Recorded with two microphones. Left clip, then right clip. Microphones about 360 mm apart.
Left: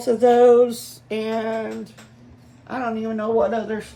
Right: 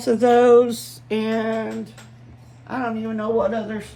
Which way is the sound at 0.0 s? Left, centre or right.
Right.